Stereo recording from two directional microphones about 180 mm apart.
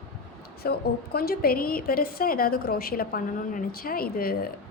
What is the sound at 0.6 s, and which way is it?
A woman's voice, 60° left (ahead or behind).